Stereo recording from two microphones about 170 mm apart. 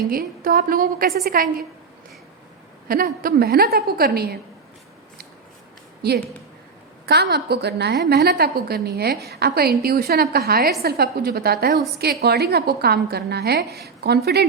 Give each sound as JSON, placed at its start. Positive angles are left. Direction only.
{"t": 0.1, "sound": "a woman's voice", "side_deg": -55}
{"t": 2.9, "sound": "a woman's voice", "side_deg": -60}
{"t": 6.0, "sound": "a woman's voice", "side_deg": -70}